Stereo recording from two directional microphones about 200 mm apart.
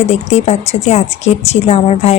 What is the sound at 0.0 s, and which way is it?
A woman's voice, 35° left (ahead or behind).